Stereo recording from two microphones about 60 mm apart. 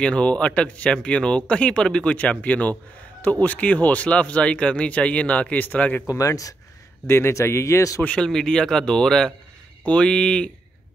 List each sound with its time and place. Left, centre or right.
0.0 s speech: centre
6.0 s speech: left
7.1 s a man's voice: left
8.0 s a man's voice: centre